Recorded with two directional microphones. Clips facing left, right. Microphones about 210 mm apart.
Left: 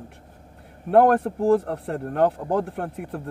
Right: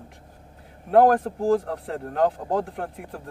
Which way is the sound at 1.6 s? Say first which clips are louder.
Left 2 dB; 60° left (ahead or behind).